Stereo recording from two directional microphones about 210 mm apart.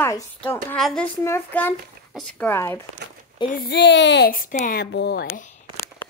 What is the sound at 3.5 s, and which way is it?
A child's voice, 50° left (ahead or behind).